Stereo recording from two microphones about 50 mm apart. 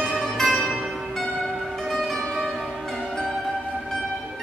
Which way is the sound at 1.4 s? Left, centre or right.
Centre.